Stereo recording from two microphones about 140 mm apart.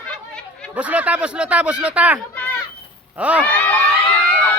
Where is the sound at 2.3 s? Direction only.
10° left (ahead or behind).